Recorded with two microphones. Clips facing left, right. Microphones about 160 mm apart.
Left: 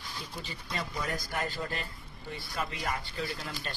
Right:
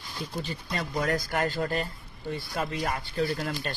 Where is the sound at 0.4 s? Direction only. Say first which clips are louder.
Right 5 dB; 55° right (ahead or behind).